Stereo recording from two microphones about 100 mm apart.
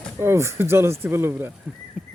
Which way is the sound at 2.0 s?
10° right (ahead or behind).